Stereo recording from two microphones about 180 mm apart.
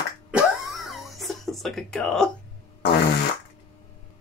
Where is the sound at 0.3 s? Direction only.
5° right (ahead or behind).